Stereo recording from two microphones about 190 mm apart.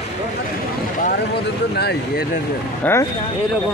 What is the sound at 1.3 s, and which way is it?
Speech, 55° left (ahead or behind).